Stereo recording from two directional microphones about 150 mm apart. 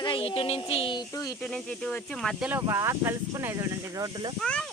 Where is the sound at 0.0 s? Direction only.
35° left (ahead or behind).